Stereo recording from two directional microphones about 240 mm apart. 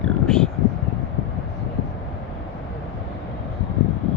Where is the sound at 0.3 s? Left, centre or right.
Centre.